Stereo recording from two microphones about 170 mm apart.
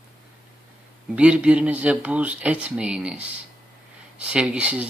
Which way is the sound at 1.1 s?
5° right (ahead or behind).